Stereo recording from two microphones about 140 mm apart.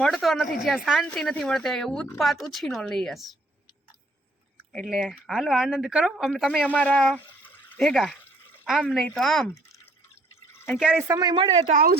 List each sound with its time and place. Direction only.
0.0 s speech: centre (ahead or behind)
4.7 s speech: centre (ahead or behind)
10.5 s drip: 15° left (ahead or behind)
10.8 s speech: 10° right (ahead or behind)
11.1 s speech: 30° right (ahead or behind)
11.7 s speech: 90° right